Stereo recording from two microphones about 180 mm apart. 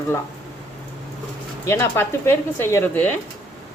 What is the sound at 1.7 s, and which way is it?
Speech, 15° left (ahead or behind).